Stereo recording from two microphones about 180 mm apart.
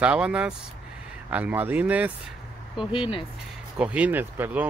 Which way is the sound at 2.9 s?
30° left (ahead or behind).